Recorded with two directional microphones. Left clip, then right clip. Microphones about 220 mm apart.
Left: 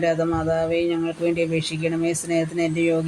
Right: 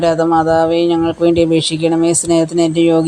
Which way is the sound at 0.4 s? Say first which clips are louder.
Right 9 dB; 25° right (ahead or behind).